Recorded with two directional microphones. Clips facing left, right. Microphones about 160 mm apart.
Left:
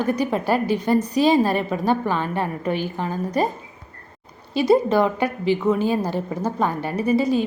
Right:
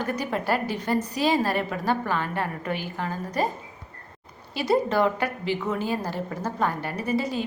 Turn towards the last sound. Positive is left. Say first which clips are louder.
# left 7 dB
turn(degrees=15)  # may be behind; listen again after turning